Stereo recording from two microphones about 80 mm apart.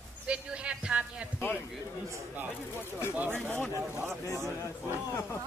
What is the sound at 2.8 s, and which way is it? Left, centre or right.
Speech, left.